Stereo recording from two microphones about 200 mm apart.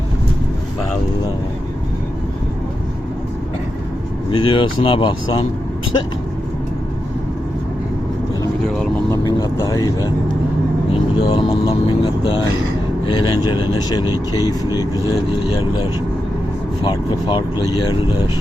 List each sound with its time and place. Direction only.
4.3 s speech: 25° left (ahead or behind)
9.0 s speech: 15° left (ahead or behind)